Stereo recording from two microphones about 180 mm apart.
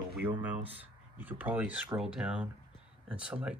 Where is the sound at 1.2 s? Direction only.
10° right (ahead or behind).